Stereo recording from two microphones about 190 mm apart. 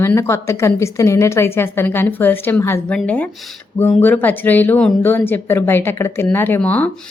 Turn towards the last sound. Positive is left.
turn(degrees=10)  # may be behind; listen again after turning